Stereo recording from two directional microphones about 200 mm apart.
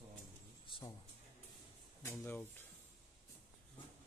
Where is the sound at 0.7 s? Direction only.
25° left (ahead or behind).